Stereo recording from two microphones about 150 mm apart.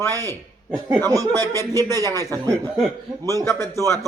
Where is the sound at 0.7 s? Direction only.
25° right (ahead or behind).